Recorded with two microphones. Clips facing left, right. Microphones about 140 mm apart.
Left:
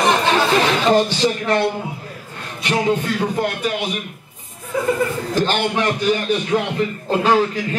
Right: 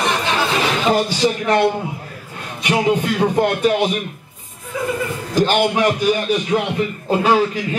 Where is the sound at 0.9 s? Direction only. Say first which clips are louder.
Right 1 dB; 10° right (ahead or behind).